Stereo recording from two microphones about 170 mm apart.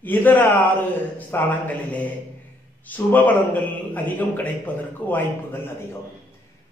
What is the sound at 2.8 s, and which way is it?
A man's voice, 10° left (ahead or behind).